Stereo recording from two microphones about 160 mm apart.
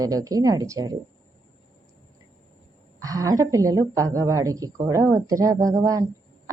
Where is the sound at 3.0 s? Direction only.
20° right (ahead or behind).